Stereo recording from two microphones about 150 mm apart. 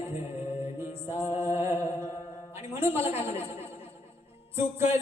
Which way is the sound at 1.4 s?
20° right (ahead or behind).